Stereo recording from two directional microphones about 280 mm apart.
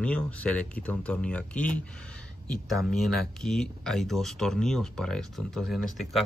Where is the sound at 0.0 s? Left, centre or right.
Centre.